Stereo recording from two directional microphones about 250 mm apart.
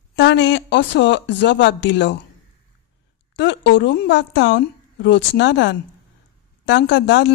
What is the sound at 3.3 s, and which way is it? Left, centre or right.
A woman's voice, left.